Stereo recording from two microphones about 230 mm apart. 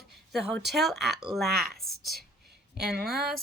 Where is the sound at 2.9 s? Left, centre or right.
Right.